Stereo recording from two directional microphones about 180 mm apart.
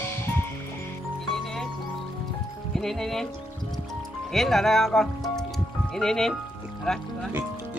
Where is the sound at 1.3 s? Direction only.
Centre (ahead or behind).